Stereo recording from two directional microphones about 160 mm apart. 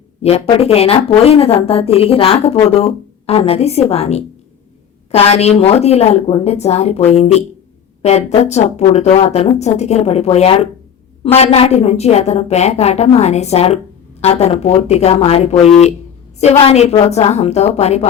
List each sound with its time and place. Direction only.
0.2 s a woman's voice: 40° left (ahead or behind)